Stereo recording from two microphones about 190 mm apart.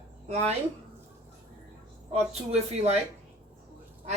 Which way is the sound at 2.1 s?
35° right (ahead or behind).